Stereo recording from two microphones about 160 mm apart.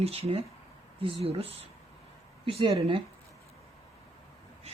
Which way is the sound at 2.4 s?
35° right (ahead or behind).